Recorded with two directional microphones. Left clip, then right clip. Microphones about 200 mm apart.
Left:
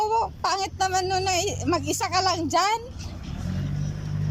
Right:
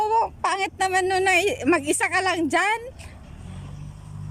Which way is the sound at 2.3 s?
30° right (ahead or behind).